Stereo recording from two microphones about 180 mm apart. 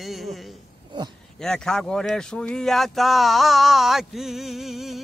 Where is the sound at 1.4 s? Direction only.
5° left (ahead or behind).